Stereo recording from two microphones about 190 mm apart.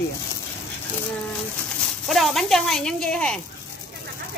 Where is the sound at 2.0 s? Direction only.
Centre (ahead or behind).